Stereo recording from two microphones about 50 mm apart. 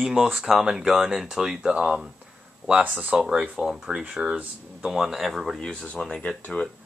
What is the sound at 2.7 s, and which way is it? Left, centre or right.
Speech, right.